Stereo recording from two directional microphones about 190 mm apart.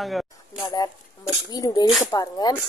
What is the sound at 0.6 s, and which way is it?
A woman's voice, 20° left (ahead or behind).